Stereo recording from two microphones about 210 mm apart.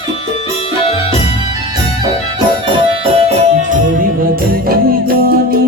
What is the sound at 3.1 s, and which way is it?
Music, 30° right (ahead or behind).